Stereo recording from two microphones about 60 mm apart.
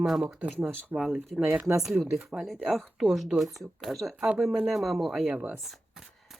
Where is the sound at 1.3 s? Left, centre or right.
Centre.